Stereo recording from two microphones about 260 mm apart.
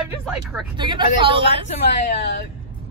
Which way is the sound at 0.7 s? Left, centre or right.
Centre.